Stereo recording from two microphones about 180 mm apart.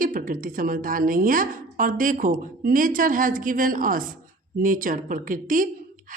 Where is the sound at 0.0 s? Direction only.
50° right (ahead or behind).